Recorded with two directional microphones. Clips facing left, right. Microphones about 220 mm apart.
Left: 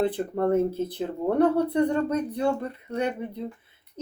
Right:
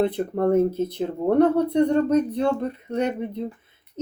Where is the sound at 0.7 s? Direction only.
10° left (ahead or behind).